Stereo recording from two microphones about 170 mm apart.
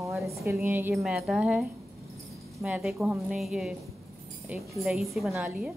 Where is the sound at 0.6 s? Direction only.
10° right (ahead or behind).